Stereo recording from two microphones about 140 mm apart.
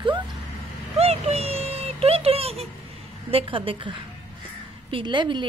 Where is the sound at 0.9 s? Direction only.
50° right (ahead or behind).